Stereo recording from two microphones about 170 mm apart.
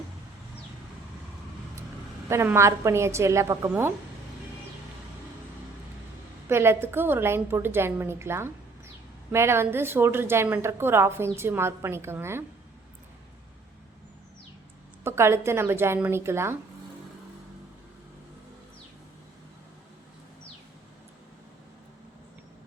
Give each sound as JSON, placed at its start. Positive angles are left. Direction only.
{"t": 2.3, "sound": "a woman's voice", "side_deg": -15}
{"t": 6.5, "sound": "a woman's voice", "side_deg": -15}
{"t": 15.0, "sound": "a woman's voice", "side_deg": -15}